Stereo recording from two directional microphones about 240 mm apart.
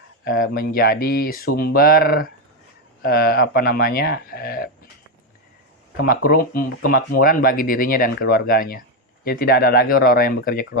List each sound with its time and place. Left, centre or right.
0.3 s speech: left
6.0 s speech: left